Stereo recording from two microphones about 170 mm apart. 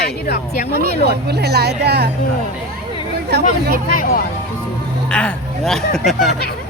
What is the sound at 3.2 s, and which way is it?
Speech, 75° right (ahead or behind).